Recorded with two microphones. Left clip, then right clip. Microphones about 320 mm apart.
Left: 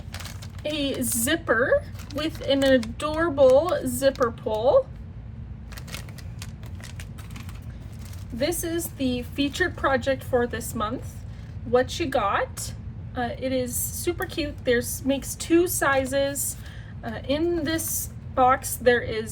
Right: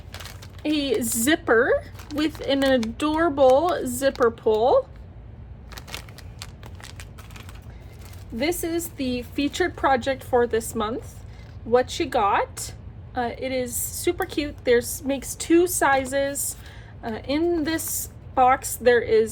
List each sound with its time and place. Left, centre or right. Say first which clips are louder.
0.1 s a sound: even; centre
0.6 s a woman's voice: right 4 dB; centre
8.4 s a woman's voice: right 1 dB; centre